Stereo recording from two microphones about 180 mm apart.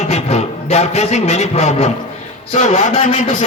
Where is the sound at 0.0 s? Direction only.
40° left (ahead or behind).